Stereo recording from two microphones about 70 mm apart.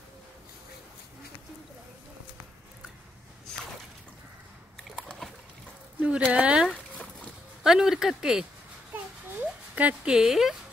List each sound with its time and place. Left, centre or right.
4.9 s boat: centre
5.9 s speech: centre
6.3 s a sound: centre
6.7 s boat: centre
7.6 s speech: centre
8.9 s a sound: right
10.1 s speech: centre